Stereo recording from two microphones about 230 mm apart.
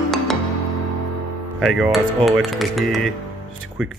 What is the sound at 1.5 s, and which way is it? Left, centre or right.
Speech, centre.